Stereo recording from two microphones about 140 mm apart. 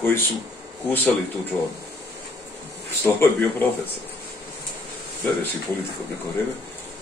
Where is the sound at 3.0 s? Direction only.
15° left (ahead or behind).